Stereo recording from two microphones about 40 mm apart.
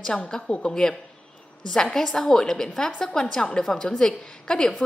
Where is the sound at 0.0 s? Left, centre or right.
Centre.